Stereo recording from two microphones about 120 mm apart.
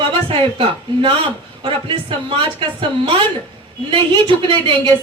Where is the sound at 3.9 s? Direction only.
45° right (ahead or behind).